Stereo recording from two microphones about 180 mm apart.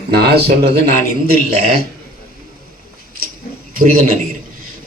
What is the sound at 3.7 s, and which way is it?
Speech, 50° right (ahead or behind).